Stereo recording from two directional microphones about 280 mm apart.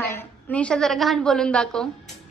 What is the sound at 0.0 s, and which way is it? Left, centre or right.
A woman's voice, centre.